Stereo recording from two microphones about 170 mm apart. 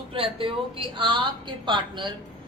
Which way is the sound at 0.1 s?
30° right (ahead or behind).